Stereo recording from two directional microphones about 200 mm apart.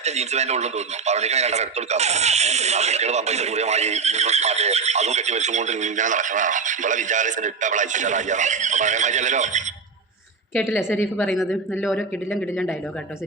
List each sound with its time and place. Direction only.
0.0 s speech: 35° right (ahead or behind)
10.5 s a woman's voice: 15° left (ahead or behind)
11.2 s a man's voice: centre (ahead or behind)